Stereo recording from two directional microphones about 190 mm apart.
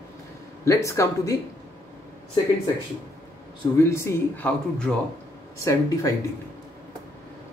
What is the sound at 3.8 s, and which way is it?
Speech, 15° left (ahead or behind).